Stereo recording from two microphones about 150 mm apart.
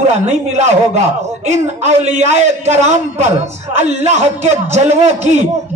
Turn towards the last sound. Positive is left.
turn(degrees=-50)  # may be behind; listen again after turning